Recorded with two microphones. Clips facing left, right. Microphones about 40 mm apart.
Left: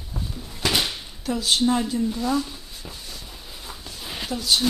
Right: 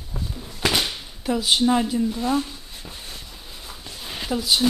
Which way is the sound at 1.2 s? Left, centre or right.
Centre.